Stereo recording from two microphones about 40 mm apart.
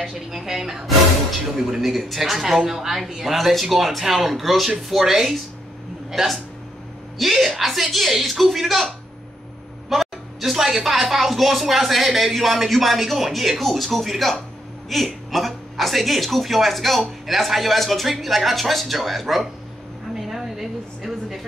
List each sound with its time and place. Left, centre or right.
0.0 s a woman's voice: centre
9.8 s speech: centre
20.2 s a sound: centre